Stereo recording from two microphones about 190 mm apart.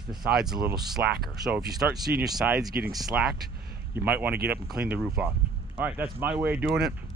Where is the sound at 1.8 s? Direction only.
Centre (ahead or behind).